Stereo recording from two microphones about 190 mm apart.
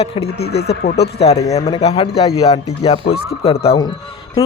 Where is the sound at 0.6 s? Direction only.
55° left (ahead or behind).